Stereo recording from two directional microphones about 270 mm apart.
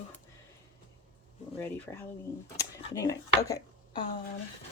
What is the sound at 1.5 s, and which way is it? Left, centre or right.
Speech, centre.